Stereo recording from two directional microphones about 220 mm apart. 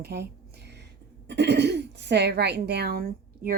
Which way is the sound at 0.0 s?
50° right (ahead or behind).